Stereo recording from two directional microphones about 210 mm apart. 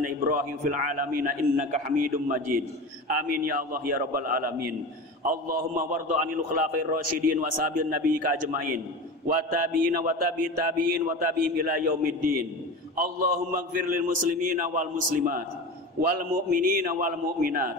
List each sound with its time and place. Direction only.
0.0 s a man's voice: 40° right (ahead or behind)